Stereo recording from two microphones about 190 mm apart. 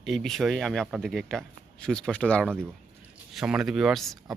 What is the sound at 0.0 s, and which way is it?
Speech, centre (ahead or behind).